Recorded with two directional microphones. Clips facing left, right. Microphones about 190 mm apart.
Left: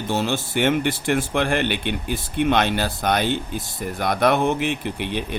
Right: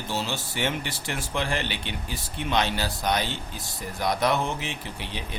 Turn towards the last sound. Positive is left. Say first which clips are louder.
# left 9 dB
turn(degrees=60)  # may be behind; listen again after turning